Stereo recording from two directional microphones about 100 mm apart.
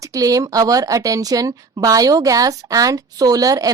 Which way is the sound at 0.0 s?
35° right (ahead or behind).